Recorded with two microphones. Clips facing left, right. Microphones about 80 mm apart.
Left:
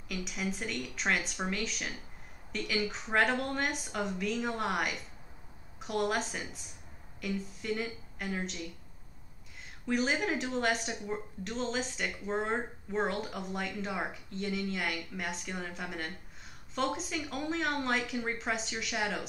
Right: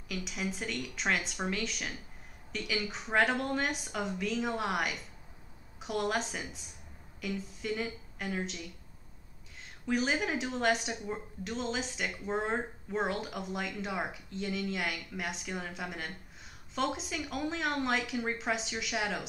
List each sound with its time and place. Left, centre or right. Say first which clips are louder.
0.1 s speech: even; centre
9.8 s speech: even; centre